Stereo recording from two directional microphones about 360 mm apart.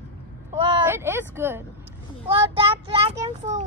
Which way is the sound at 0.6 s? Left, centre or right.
Centre.